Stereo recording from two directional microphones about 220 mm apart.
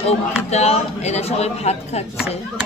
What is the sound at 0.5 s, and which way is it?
A man's voice, 30° left (ahead or behind).